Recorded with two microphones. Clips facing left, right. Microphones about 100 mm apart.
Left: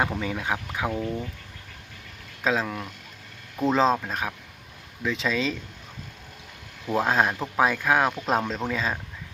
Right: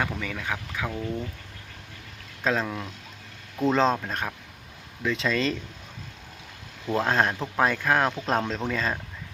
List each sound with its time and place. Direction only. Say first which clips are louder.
0.0 s speech: left 3 dB; 20° left (ahead or behind)
2.4 s speech: left 1 dB; 5° left (ahead or behind)
6.8 s speech: left 1 dB; 5° left (ahead or behind)